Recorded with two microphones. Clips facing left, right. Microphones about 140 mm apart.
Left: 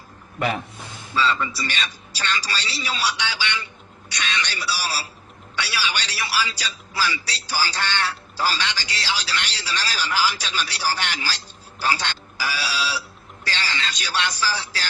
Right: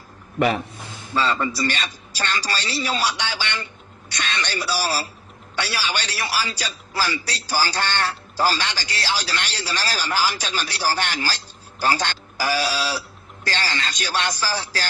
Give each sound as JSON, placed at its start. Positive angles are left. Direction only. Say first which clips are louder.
{"t": 0.3, "sound": "a man's voice", "louder": "right 4 dB", "side_deg": -25}
{"t": 1.1, "sound": "a man's voice", "louder": "right 1 dB", "side_deg": -45}